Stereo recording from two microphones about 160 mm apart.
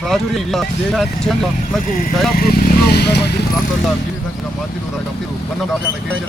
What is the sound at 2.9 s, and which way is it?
Speech, 90° left.